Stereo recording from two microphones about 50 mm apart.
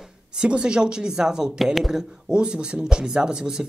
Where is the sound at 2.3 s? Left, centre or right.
Centre.